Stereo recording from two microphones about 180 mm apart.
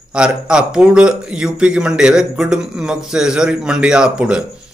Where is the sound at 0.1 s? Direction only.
5° right (ahead or behind).